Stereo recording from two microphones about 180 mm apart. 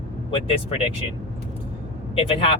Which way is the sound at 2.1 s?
30° left (ahead or behind).